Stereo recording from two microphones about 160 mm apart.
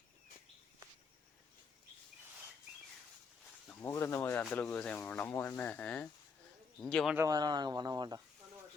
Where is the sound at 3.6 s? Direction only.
15° left (ahead or behind).